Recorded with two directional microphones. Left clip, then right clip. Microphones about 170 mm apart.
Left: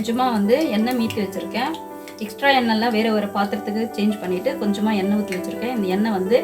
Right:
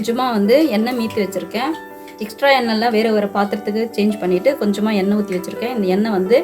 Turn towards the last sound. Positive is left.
turn(degrees=-50)  # may be behind; listen again after turning